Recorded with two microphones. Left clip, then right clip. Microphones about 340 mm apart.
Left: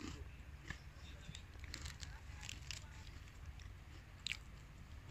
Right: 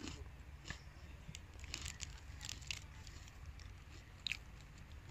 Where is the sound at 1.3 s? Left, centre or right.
Centre.